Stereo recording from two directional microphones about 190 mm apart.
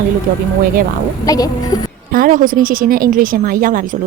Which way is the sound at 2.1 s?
50° right (ahead or behind).